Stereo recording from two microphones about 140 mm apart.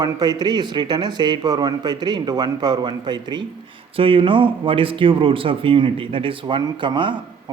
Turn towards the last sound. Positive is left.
turn(degrees=-35)  # may be behind; listen again after turning